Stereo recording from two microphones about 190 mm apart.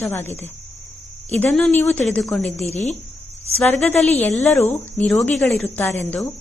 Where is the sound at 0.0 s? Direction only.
10° left (ahead or behind).